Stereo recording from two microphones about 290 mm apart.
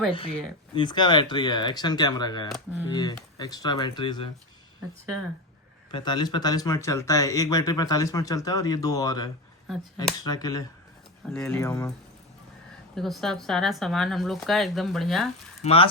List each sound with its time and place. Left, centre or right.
0.1 s speech: centre
5.9 s speech: centre
9.7 s speech: centre
10.2 s speech: centre
13.0 s speech: centre
15.6 s speech: centre